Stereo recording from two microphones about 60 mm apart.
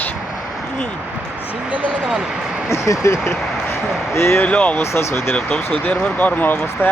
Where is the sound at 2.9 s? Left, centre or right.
Left.